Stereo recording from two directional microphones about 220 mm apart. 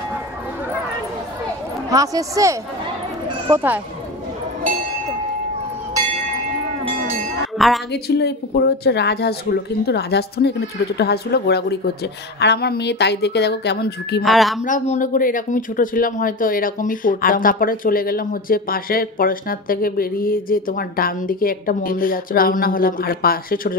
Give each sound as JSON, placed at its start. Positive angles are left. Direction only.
{"t": 1.9, "sound": "speech", "side_deg": -15}
{"t": 7.5, "sound": "speech", "side_deg": 0}
{"t": 7.9, "sound": "a woman's voice", "side_deg": 50}
{"t": 14.2, "sound": "a woman's voice", "side_deg": 0}
{"t": 14.6, "sound": "speech", "side_deg": 35}